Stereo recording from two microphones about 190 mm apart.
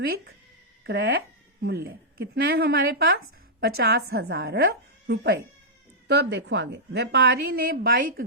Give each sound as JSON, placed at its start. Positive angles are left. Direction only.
{"t": 0.9, "sound": "a woman's voice", "side_deg": -65}